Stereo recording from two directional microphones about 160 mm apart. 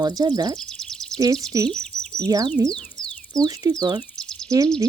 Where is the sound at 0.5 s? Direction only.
5° left (ahead or behind).